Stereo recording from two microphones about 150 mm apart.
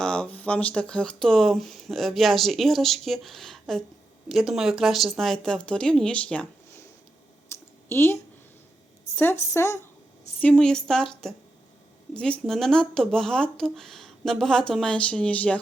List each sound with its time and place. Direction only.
0.0 s speech: 5° left (ahead or behind)
7.5 s clicking: 20° left (ahead or behind)
7.9 s speech: 15° left (ahead or behind)
9.5 s a woman's voice: 20° left (ahead or behind)
10.4 s speech: 5° left (ahead or behind)